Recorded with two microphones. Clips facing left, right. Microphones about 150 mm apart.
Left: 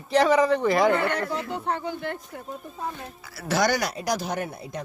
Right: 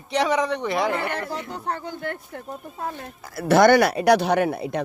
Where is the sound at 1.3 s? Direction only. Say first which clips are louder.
Left 1 dB; 40° right (ahead or behind).